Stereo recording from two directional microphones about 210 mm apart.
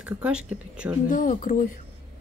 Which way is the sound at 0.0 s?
5° right (ahead or behind).